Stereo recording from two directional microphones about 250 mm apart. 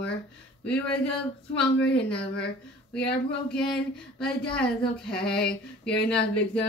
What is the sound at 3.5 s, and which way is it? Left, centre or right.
Female singing, centre.